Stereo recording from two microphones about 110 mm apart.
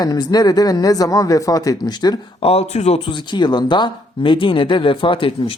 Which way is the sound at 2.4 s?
70° left (ahead or behind).